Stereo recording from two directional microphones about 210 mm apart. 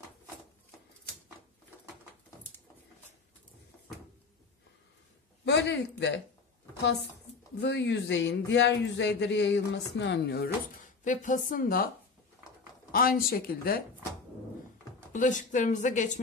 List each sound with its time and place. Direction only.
5.4 s speech: 55° left (ahead or behind)
7.6 s speech: 55° left (ahead or behind)
11.1 s speech: 40° left (ahead or behind)
12.9 s speech: 45° left (ahead or behind)
15.1 s speech: 35° left (ahead or behind)